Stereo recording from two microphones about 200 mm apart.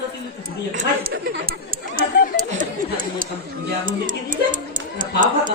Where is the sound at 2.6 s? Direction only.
45° right (ahead or behind).